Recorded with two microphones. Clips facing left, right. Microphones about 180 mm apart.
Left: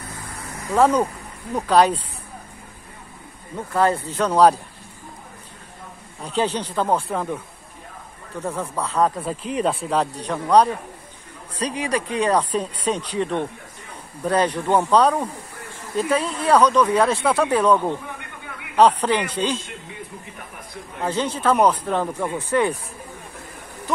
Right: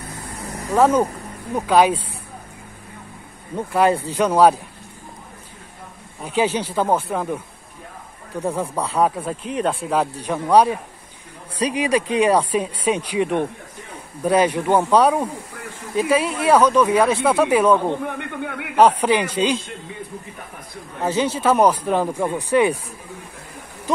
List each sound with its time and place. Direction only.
0.7 s speech: 5° right (ahead or behind)
3.5 s speech: 15° right (ahead or behind)
6.2 s speech: 10° right (ahead or behind)
8.4 s speech: 10° right (ahead or behind)
18.0 s snake: 60° right (ahead or behind)
18.8 s speech: 10° right (ahead or behind)
21.0 s speech: 5° right (ahead or behind)